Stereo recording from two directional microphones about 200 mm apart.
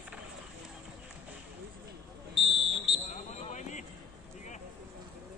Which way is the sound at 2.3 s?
Centre (ahead or behind).